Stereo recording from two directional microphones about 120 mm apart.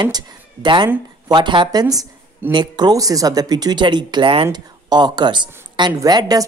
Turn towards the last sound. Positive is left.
turn(degrees=-35)  # may be behind; listen again after turning